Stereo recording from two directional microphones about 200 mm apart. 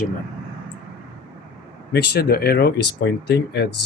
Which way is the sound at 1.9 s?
55° left (ahead or behind).